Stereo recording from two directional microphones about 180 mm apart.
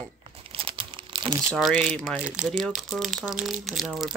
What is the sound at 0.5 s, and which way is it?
Crumpling, 30° right (ahead or behind).